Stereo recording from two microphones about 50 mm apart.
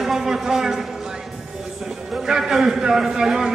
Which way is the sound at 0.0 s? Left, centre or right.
Centre.